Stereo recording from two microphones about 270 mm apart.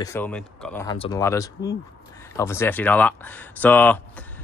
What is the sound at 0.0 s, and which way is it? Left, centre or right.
Speech, centre.